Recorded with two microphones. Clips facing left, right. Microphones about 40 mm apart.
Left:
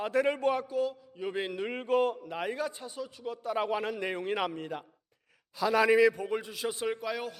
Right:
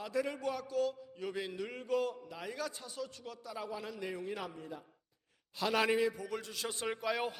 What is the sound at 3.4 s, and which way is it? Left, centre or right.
A man's voice, left.